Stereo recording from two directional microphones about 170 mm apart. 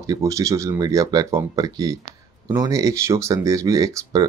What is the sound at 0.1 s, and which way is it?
Speech, 20° right (ahead or behind).